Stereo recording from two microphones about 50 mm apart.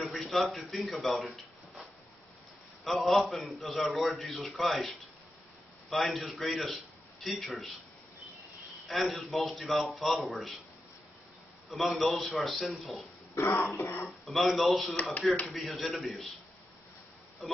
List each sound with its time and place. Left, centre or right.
0.0 s a man's voice: centre
6.1 s a man's voice: centre
8.8 s a man's voice: centre
11.7 s a man's voice: centre
13.4 s speech: left
14.0 s a man's voice: centre
17.4 s speech: centre